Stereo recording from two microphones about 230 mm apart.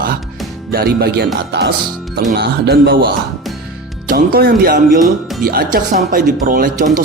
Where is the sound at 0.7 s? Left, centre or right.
Right.